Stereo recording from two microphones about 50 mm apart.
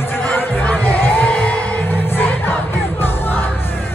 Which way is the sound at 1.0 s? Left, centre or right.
Left.